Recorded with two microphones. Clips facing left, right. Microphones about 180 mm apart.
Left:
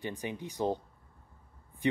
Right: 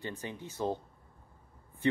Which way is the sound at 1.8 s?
15° left (ahead or behind).